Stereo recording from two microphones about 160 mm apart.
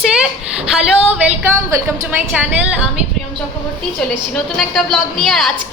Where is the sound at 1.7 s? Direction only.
20° right (ahead or behind).